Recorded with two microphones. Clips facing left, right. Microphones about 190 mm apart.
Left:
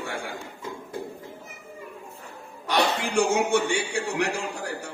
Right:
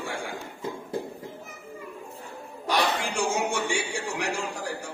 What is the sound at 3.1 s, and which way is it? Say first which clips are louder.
A man's voice: left 5 dB; 60° left (ahead or behind).